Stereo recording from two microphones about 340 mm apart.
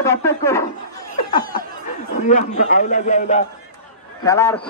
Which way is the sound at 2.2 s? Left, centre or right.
Left.